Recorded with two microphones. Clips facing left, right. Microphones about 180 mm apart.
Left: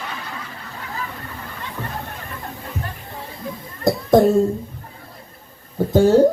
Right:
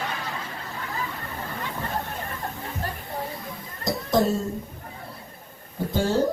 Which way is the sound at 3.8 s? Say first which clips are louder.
Left 8 dB; 55° left (ahead or behind).